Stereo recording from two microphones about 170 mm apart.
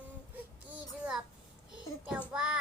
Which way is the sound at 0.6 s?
5° right (ahead or behind).